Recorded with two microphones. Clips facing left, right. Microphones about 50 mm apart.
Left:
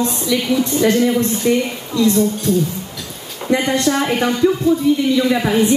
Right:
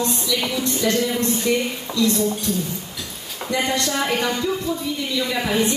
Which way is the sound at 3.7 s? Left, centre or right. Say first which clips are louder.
Left 5 dB; left.